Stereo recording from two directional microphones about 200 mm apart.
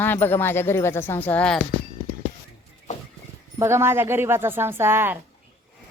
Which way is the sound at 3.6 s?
10° right (ahead or behind).